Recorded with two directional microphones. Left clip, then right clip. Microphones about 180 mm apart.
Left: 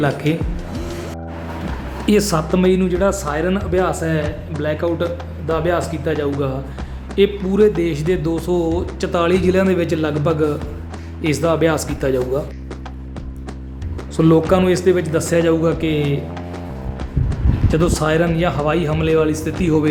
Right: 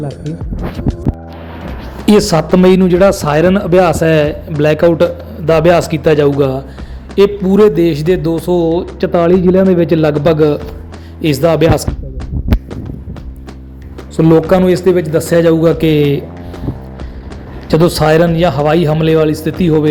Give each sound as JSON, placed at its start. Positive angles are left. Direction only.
{"t": 0.0, "sound": "speech", "side_deg": 0}
{"t": 2.0, "sound": "a man's voice", "side_deg": -20}
{"t": 7.2, "sound": "speech", "side_deg": -20}
{"t": 14.2, "sound": "speech", "side_deg": -20}
{"t": 17.7, "sound": "speech", "side_deg": -25}